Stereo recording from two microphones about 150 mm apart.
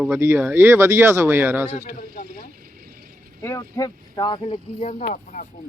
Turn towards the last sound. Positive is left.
turn(degrees=60)  # may be behind; listen again after turning